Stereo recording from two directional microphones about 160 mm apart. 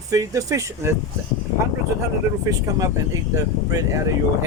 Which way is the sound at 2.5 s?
20° right (ahead or behind).